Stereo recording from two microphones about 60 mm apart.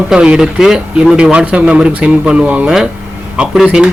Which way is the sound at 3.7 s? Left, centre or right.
Centre.